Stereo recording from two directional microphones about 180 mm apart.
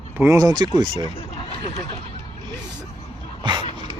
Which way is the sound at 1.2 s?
35° left (ahead or behind).